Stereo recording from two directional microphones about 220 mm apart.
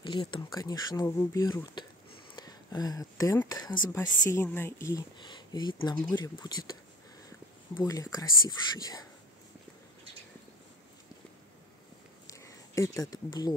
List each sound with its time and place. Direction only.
0.0 s speech: 20° left (ahead or behind)
7.2 s whispering: 15° left (ahead or behind)
8.5 s speech: 15° left (ahead or behind)
12.3 s a sound: 15° left (ahead or behind)